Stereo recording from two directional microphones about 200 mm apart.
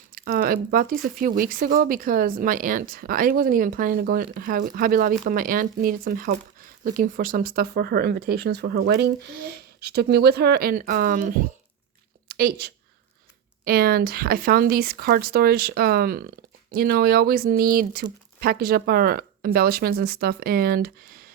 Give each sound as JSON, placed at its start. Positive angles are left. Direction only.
{"t": 0.1, "sound": "a woman's voice", "side_deg": -45}